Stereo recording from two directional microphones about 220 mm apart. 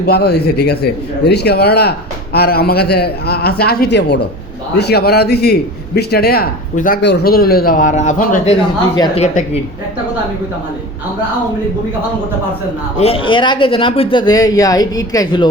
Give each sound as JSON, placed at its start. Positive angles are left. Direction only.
{"t": 0.0, "sound": "speech", "side_deg": 45}
{"t": 13.0, "sound": "speech", "side_deg": 25}